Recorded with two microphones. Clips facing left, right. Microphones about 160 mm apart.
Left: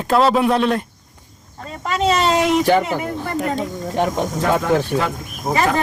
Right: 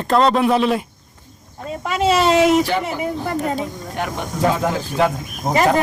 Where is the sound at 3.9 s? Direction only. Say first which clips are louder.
Left 7 dB; 30° left (ahead or behind).